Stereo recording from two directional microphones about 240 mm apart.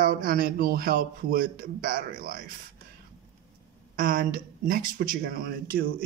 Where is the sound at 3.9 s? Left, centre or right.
Right.